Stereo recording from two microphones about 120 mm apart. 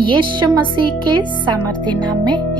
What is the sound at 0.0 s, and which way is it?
Speech, 40° right (ahead or behind).